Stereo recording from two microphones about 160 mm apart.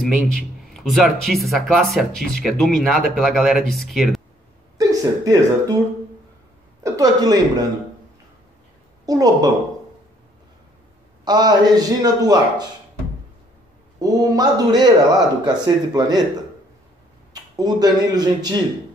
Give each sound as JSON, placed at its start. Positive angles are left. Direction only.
{"t": 0.7, "sound": "speech", "side_deg": 0}
{"t": 4.7, "sound": "speech", "side_deg": -20}
{"t": 6.8, "sound": "speech", "side_deg": -25}
{"t": 9.0, "sound": "speech", "side_deg": -25}
{"t": 11.2, "sound": "speech", "side_deg": -25}
{"t": 13.9, "sound": "speech", "side_deg": -25}
{"t": 17.3, "sound": "speech", "side_deg": -25}